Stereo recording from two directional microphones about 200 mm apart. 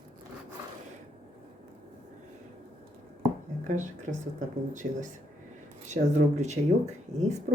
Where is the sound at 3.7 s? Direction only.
40° right (ahead or behind).